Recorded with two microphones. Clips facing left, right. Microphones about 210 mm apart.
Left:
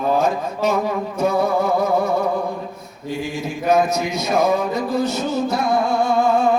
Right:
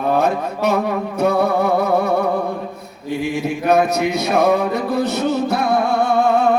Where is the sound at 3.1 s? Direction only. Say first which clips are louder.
Right 4 dB; 65° right (ahead or behind).